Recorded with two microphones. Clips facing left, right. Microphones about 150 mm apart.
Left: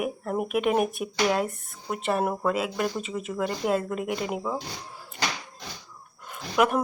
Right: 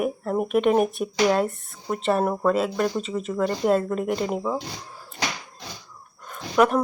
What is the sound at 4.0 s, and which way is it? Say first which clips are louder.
Speech: right 4 dB; 45° right (ahead or behind).